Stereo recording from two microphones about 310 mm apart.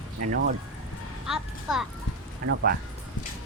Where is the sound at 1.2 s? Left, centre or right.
Centre.